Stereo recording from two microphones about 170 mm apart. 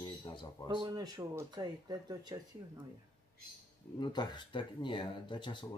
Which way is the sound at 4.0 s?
25° left (ahead or behind).